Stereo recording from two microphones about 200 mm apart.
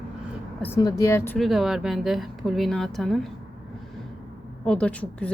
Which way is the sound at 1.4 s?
Centre (ahead or behind).